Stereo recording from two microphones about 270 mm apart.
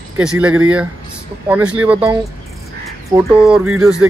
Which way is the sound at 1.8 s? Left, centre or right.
Centre.